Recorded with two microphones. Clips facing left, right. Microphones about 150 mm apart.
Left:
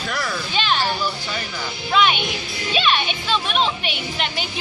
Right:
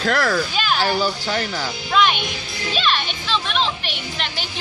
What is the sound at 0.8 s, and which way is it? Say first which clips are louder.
Speech: right 4 dB; 75° right (ahead or behind).